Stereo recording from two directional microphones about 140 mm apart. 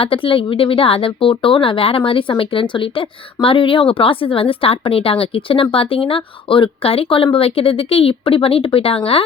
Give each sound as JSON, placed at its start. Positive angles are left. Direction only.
{"t": 0.0, "sound": "a woman's voice", "side_deg": 40}